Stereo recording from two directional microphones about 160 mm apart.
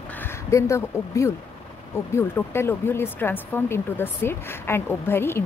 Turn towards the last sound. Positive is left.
turn(degrees=15)  # may be behind; listen again after turning